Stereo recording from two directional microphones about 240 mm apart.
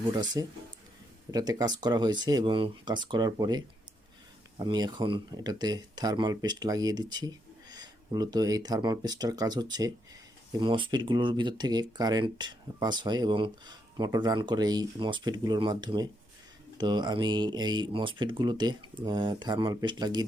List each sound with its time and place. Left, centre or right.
0.1 s speech: centre